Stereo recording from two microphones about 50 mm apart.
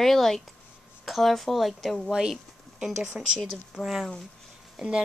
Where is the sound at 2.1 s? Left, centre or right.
Centre.